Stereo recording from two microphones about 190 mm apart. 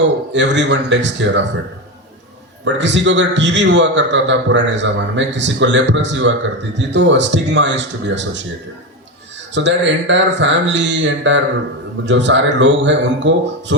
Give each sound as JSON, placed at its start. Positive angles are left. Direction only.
{"t": 0.3, "sound": "a man's voice", "side_deg": -70}
{"t": 2.6, "sound": "a man's voice", "side_deg": -70}
{"t": 9.6, "sound": "a man's voice", "side_deg": -70}